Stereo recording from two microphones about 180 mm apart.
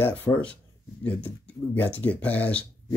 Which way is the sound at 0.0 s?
10° left (ahead or behind).